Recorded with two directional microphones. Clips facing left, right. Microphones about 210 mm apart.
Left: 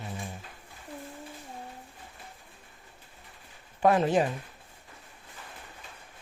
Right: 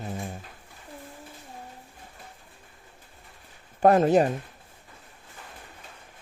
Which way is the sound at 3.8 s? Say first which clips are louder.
Right 5 dB; 40° right (ahead or behind).